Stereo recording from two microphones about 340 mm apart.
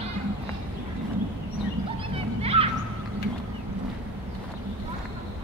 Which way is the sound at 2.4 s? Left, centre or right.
Centre.